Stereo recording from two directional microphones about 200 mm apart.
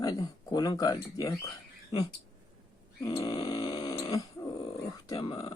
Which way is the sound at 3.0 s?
20° left (ahead or behind).